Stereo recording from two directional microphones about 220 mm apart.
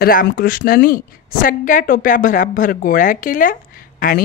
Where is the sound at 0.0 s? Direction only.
40° left (ahead or behind).